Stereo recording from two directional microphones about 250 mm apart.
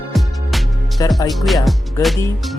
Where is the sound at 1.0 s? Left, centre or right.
Centre.